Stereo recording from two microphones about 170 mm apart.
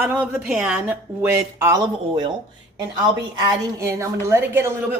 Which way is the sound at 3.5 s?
15° right (ahead or behind).